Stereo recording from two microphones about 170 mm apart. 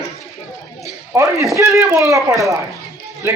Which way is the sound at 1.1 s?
20° right (ahead or behind).